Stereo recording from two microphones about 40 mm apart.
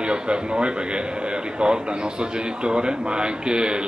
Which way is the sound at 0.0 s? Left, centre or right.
Right.